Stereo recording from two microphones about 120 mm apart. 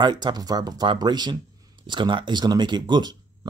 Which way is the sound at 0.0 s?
35° right (ahead or behind).